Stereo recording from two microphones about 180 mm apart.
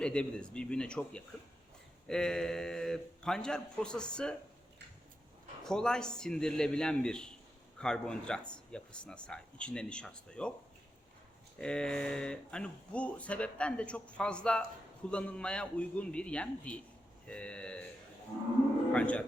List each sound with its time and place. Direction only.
0.0 s speech: 5° left (ahead or behind)
5.6 s speech: 5° left (ahead or behind)
11.5 s a man's voice: 5° left (ahead or behind)
18.9 s a man's voice: 5° left (ahead or behind)